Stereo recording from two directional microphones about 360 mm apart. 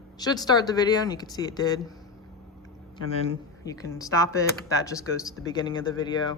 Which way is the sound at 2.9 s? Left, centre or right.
Centre.